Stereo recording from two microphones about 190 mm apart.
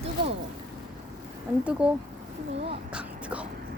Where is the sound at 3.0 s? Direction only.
5° right (ahead or behind).